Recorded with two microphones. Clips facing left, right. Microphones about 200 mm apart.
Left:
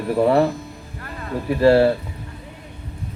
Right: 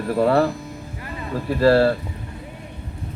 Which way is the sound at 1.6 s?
15° left (ahead or behind).